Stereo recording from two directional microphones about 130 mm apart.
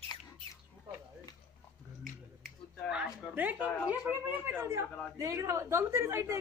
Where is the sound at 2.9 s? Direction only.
5° right (ahead or behind).